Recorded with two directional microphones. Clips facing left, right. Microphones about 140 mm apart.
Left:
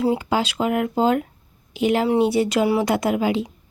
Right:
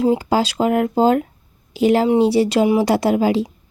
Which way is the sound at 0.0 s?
30° right (ahead or behind).